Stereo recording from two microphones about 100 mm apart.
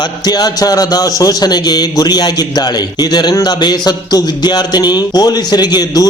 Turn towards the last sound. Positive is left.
turn(degrees=40)  # may be behind; listen again after turning